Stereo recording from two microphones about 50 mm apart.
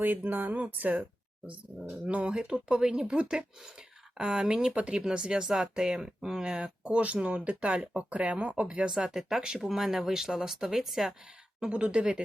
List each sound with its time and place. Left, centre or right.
0.0 s speech: right
8.9 s speech: centre
11.6 s speech: right